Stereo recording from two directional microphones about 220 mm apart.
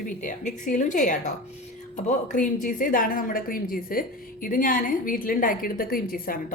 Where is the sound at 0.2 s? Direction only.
35° left (ahead or behind).